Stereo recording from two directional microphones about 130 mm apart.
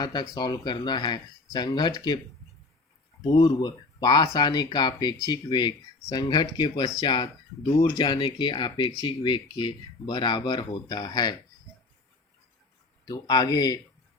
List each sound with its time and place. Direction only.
0.0 s speech: 30° left (ahead or behind)
3.2 s speech: 25° left (ahead or behind)
6.0 s speech: 25° left (ahead or behind)
6.2 s speech: 35° left (ahead or behind)
13.1 s speech: 30° left (ahead or behind)